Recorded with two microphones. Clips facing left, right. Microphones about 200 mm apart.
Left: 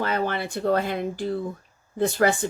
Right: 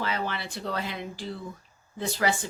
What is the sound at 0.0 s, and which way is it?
A woman's voice, 50° left (ahead or behind).